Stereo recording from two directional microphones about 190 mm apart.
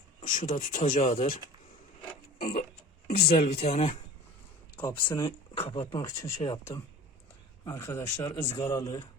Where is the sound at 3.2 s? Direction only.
55° left (ahead or behind).